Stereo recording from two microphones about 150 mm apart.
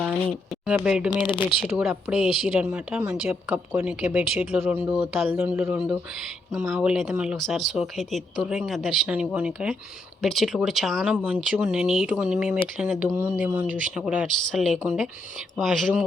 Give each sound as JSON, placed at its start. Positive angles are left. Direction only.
{"t": 0.6, "sound": "speech", "side_deg": -5}
{"t": 1.2, "sound": "speech", "side_deg": 30}
{"t": 1.6, "sound": "speech", "side_deg": -5}
{"t": 11.1, "sound": "speech", "side_deg": -10}